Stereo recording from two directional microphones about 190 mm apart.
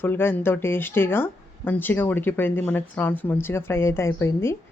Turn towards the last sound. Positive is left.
turn(degrees=15)  # may be behind; listen again after turning